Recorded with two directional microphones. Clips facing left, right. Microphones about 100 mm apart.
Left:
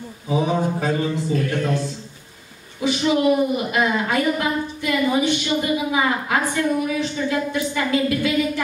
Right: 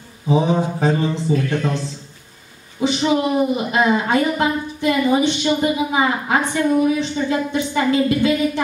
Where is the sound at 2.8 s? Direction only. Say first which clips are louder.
Right 1 dB; 25° right (ahead or behind).